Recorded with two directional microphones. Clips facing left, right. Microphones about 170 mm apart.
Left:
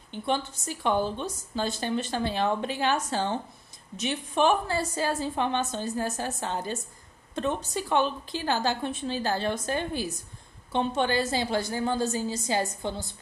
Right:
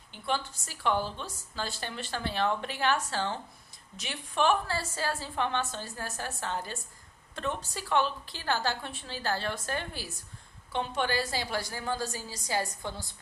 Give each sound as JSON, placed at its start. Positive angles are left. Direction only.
{"t": 0.1, "sound": "a woman's voice", "side_deg": 20}